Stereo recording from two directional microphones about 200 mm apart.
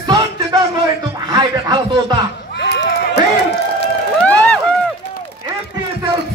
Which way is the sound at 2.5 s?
60° left (ahead or behind).